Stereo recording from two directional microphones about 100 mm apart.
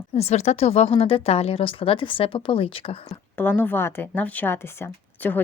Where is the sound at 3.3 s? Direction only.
20° left (ahead or behind).